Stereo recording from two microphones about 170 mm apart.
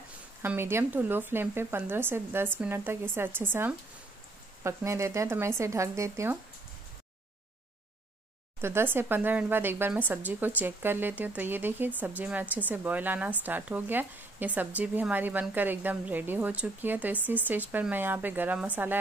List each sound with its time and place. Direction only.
0.4 s speech: 15° right (ahead or behind)
8.5 s speech: 15° right (ahead or behind)